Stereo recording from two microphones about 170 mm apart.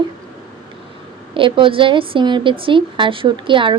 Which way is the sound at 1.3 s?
30° right (ahead or behind).